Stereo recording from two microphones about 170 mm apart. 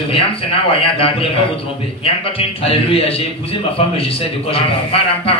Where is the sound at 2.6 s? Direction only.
35° left (ahead or behind).